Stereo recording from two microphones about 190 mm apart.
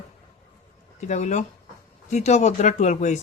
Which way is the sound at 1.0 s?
40° left (ahead or behind).